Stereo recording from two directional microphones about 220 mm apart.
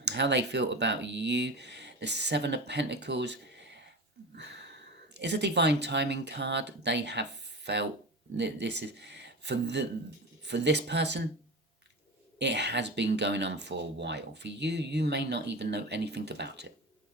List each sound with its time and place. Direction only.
0.0 s speech: 50° right (ahead or behind)
12.4 s speech: 50° right (ahead or behind)